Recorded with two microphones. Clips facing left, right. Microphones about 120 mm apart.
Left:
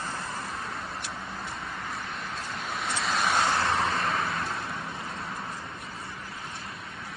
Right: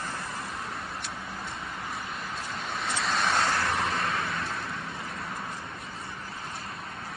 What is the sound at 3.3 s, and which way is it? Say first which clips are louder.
Vehicle: left 4 dB; 25° left (ahead or behind).